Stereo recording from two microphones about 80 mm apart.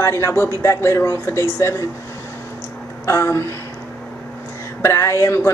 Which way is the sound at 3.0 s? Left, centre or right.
Left.